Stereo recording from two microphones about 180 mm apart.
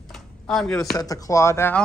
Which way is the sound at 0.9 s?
20° left (ahead or behind).